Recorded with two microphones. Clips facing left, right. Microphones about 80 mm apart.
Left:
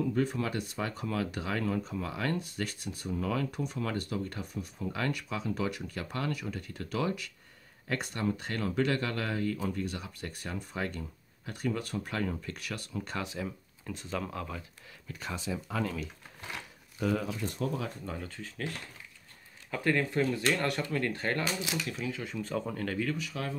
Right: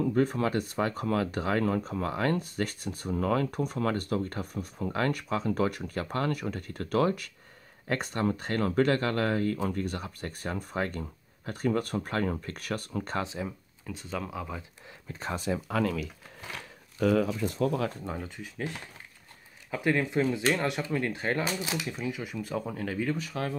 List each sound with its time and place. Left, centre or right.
0.0 s speech: right
13.8 s speech: centre
15.0 s speech: right
15.3 s speech: right
15.7 s speech: right
17.6 s speech: right
18.2 s speech: centre
23.1 s speech: right